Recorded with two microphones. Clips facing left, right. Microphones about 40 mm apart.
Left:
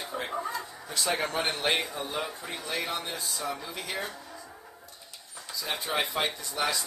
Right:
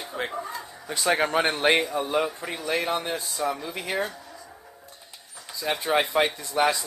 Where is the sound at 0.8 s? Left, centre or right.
Right.